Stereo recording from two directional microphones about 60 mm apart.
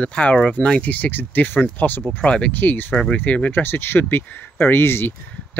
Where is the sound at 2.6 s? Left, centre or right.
Left.